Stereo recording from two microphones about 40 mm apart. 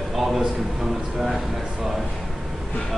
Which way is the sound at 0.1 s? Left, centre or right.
Centre.